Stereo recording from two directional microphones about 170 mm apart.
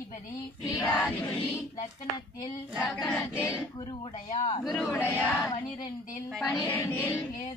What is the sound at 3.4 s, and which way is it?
Music, 15° left (ahead or behind).